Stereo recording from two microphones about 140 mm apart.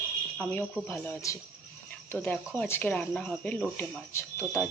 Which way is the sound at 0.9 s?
15° left (ahead or behind).